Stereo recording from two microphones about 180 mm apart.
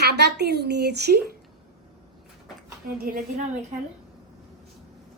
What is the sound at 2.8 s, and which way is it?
Speech, 55° right (ahead or behind).